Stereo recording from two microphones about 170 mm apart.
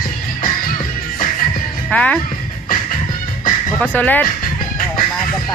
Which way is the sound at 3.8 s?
10° left (ahead or behind).